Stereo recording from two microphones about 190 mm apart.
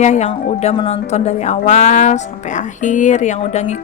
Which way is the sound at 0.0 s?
40° left (ahead or behind).